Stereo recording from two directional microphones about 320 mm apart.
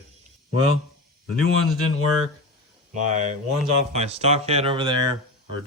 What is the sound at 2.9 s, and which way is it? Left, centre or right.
Speech, right.